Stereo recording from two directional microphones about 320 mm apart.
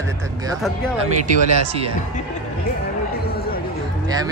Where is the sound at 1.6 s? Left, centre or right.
Centre.